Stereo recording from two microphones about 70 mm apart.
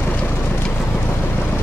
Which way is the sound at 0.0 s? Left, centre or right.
Left.